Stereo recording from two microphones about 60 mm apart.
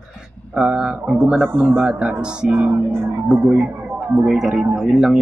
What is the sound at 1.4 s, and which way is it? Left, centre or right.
Speech, right.